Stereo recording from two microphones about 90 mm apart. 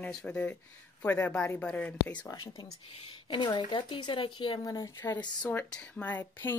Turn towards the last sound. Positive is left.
turn(degrees=20)  # may be behind; listen again after turning